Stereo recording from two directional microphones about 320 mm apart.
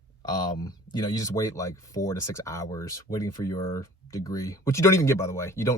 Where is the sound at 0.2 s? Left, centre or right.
Centre.